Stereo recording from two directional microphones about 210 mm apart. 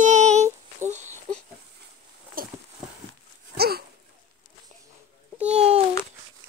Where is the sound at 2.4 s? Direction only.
45° right (ahead or behind).